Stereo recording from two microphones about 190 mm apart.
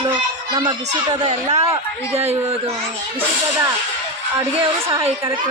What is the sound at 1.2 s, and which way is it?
Speech, 35° right (ahead or behind).